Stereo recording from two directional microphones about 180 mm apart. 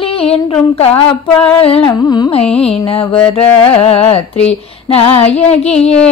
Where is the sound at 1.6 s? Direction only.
30° left (ahead or behind).